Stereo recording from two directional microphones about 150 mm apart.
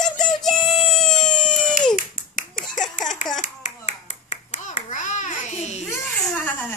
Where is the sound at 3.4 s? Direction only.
50° left (ahead or behind).